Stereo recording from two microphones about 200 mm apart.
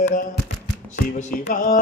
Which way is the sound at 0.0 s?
40° left (ahead or behind).